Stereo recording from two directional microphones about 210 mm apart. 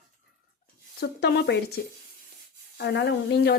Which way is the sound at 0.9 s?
50° left (ahead or behind).